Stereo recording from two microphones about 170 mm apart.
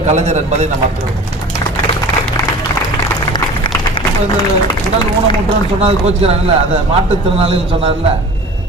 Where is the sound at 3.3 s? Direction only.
30° left (ahead or behind).